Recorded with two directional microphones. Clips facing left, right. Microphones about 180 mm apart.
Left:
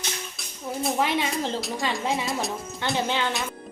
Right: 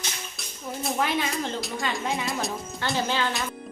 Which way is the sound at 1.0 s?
25° left (ahead or behind).